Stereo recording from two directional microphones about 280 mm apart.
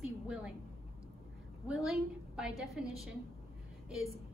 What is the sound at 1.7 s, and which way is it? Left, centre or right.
A woman's voice, centre.